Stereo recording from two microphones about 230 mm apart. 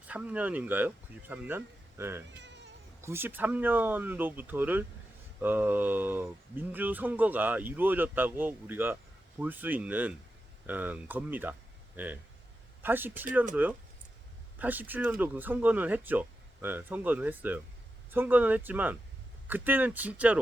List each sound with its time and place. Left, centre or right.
0.1 s speech: centre
2.4 s insect: right
3.0 s speech: centre